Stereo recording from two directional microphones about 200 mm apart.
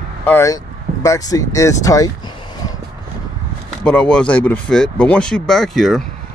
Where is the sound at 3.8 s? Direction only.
5° left (ahead or behind).